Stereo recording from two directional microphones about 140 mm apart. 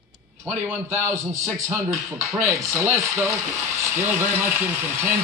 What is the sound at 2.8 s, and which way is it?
Speech, 20° right (ahead or behind).